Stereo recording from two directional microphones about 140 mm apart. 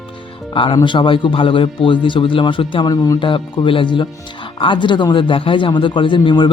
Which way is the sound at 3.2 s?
35° left (ahead or behind).